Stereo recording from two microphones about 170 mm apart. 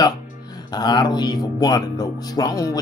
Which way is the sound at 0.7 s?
25° left (ahead or behind).